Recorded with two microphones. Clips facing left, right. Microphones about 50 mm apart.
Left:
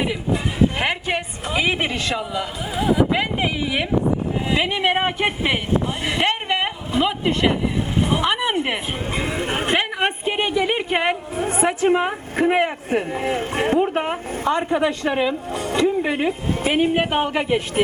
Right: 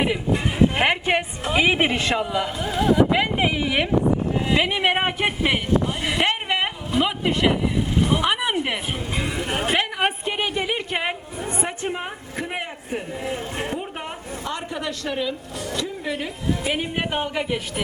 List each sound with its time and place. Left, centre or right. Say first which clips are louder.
0.8 s a woman's voice: right 2 dB; centre
2.6 s speech: even; centre
6.0 s a sound: left 1 dB; centre
7.0 s speech: left 1 dB; centre
7.9 s a sound: even; left
8.2 s speech: left 2 dB; centre
9.2 s speech: left 1 dB; left
10.2 s a woman's voice: left 4 dB; centre
11.4 s a woman's voice: left 8 dB; left
11.9 s a woman's voice: left 10 dB; left
12.5 s speech: left 9 dB; left
16.7 s speech: left 7 dB; centre